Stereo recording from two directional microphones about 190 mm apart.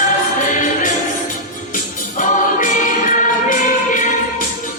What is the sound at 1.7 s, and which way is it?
Music, 45° left (ahead or behind).